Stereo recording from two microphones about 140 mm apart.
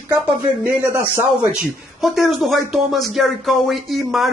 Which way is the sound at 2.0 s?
Centre (ahead or behind).